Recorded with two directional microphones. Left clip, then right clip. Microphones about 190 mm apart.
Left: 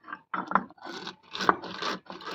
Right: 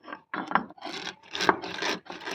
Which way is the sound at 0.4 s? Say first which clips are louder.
Right 1 dB; 20° right (ahead or behind).